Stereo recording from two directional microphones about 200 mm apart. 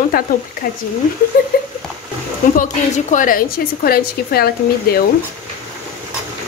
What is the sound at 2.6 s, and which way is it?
A woman's voice, 40° left (ahead or behind).